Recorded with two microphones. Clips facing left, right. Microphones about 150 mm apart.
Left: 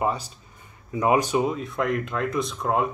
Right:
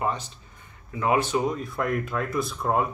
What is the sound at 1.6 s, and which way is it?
Speech, centre (ahead or behind).